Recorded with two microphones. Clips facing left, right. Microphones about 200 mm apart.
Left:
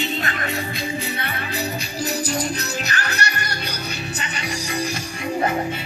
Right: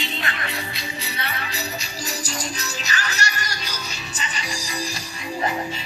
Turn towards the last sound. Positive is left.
turn(degrees=60)  # may be behind; listen again after turning